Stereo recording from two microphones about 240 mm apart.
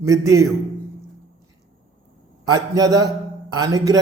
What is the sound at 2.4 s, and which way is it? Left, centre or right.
A man's voice, centre.